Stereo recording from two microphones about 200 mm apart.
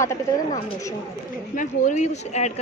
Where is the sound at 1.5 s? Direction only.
40° left (ahead or behind).